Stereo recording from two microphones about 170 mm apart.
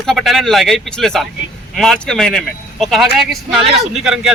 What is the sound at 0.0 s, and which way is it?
Speech, centre (ahead or behind).